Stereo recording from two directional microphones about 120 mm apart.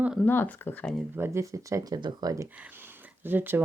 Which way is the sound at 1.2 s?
25° right (ahead or behind).